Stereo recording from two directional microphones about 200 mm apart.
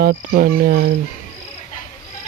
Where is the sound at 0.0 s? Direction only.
50° right (ahead or behind).